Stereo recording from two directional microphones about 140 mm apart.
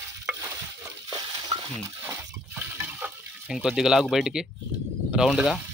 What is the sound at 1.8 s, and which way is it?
Water, 20° right (ahead or behind).